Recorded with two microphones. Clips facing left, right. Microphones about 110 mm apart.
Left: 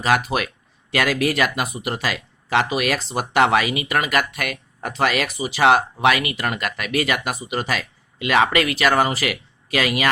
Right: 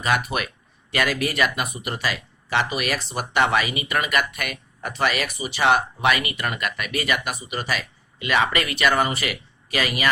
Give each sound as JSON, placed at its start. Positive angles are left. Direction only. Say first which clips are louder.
{"t": 0.0, "sound": "speech", "louder": "left 4 dB", "side_deg": 85}